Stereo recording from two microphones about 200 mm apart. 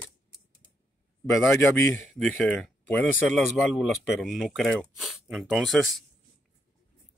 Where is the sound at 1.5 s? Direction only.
Centre (ahead or behind).